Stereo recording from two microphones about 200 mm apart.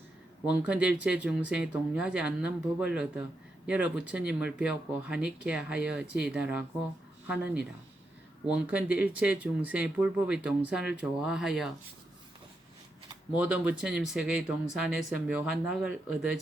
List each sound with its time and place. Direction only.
0.4 s speech: 5° right (ahead or behind)
13.3 s speech: 5° right (ahead or behind)